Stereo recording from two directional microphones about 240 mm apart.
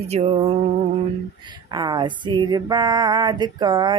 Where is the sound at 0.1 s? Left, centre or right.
Right.